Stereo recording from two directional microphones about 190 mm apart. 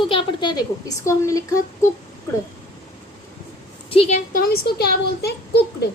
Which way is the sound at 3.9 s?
30° left (ahead or behind).